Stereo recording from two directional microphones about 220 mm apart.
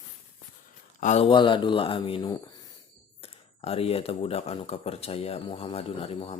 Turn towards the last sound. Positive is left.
turn(degrees=25)  # may be behind; listen again after turning